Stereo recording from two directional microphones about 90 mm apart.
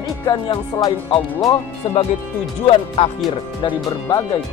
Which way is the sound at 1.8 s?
75° left (ahead or behind).